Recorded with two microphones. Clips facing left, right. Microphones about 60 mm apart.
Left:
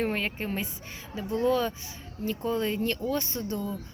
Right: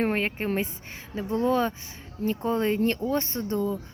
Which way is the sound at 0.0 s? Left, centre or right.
Right.